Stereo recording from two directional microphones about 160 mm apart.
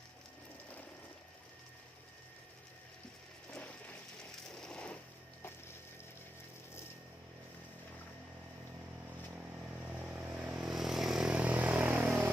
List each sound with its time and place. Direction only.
3.5 s a sound: 10° left (ahead or behind)
4.2 s coin: 5° left (ahead or behind)
9.8 s vehicle: 10° right (ahead or behind)